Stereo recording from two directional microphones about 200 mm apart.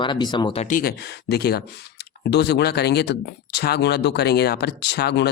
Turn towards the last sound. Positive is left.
turn(degrees=55)  # may be behind; listen again after turning